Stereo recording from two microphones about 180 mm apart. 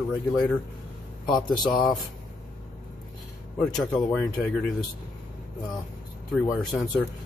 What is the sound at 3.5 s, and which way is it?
Speech, 5° left (ahead or behind).